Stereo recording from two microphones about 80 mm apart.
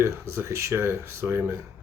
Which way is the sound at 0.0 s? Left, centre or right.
Right.